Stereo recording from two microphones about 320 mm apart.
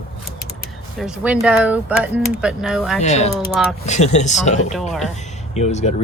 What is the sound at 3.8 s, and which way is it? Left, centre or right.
Speech, left.